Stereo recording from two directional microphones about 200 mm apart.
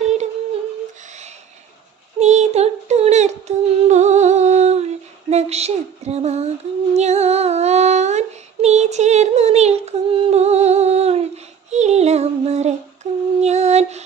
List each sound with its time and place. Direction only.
2.1 s a sound: 35° right (ahead or behind)
7.0 s child singing: 35° right (ahead or behind)
11.7 s female singing: 35° right (ahead or behind)